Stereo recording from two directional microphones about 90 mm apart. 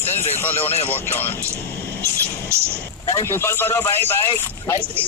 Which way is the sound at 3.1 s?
35° left (ahead or behind).